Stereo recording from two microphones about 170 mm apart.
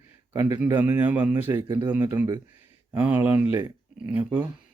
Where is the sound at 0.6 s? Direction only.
10° right (ahead or behind).